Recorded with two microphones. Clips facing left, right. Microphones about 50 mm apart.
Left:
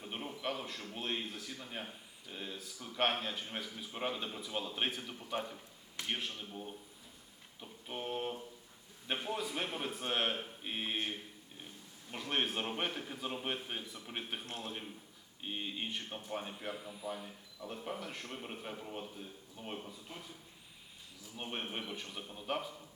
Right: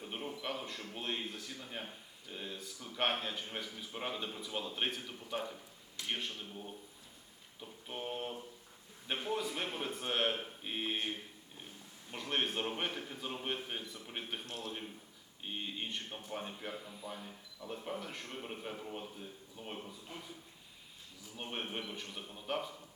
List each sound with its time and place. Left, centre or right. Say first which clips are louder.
0.0 s a man's voice: left 1 dB; centre
7.6 s a sound: left 1 dB; centre
9.0 s speech: right 1 dB; centre
12.1 s speech: even; centre
14.4 s a man's voice: even; left
15.4 s speech: left 1 dB; centre
21.3 s speech: even; centre